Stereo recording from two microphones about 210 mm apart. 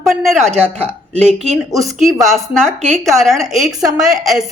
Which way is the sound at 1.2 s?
30° right (ahead or behind).